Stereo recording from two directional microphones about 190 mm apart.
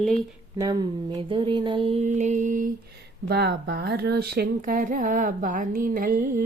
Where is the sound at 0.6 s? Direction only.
20° right (ahead or behind); by 2.7 s 45° right (ahead or behind).